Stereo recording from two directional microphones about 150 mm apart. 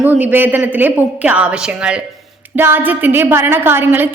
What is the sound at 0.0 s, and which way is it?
A woman's voice, 10° right (ahead or behind).